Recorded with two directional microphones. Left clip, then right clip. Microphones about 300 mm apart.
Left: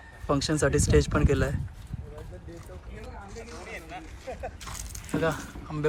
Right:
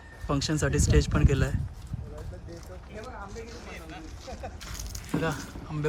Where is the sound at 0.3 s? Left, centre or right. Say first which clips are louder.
Left 3 dB; centre.